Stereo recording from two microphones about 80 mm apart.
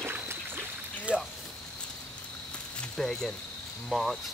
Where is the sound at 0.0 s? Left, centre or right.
Right.